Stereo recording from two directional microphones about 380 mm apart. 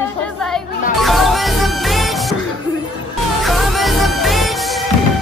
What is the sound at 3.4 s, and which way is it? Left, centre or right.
Music, centre.